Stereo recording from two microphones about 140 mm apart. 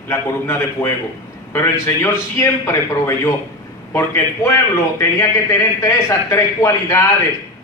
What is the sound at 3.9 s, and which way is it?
A man's voice, 20° left (ahead or behind).